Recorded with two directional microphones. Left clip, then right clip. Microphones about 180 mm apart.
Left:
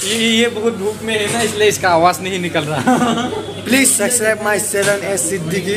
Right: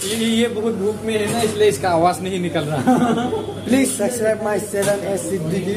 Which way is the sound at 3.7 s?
20° right (ahead or behind).